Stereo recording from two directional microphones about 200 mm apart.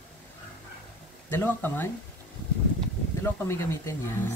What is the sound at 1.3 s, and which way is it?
Speech, 10° left (ahead or behind).